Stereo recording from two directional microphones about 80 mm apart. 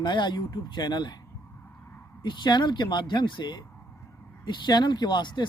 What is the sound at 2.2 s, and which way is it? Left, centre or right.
Speech, left.